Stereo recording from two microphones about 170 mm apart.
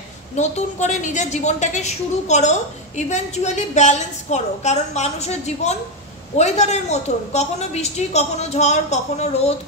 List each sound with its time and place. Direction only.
0.4 s a woman's voice: 45° left (ahead or behind)